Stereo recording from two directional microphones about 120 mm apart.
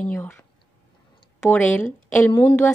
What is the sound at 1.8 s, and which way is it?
Speech, 90° left.